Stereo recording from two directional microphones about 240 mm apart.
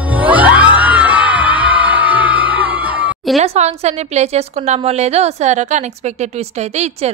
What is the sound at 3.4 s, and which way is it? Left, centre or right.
A woman's voice, right.